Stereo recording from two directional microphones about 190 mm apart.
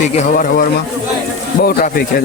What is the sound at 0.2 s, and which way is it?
Speech, 45° left (ahead or behind).